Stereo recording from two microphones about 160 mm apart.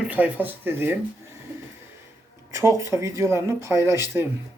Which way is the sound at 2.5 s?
20° right (ahead or behind).